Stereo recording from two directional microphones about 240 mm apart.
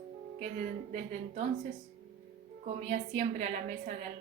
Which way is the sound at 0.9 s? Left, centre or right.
Right.